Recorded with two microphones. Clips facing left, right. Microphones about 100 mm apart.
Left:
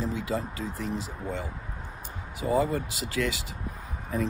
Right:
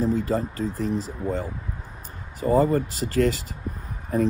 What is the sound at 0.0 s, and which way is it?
Speech, 40° right (ahead or behind).